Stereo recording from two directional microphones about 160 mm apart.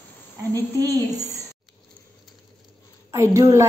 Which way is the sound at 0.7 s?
20° right (ahead or behind).